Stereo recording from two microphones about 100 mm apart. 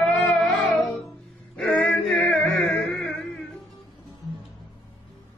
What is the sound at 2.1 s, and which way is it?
Music, centre (ahead or behind).